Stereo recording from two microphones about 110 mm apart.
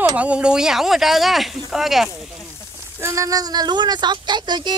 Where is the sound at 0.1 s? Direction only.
10° right (ahead or behind).